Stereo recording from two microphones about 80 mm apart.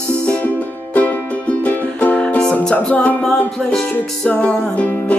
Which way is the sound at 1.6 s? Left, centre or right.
Centre.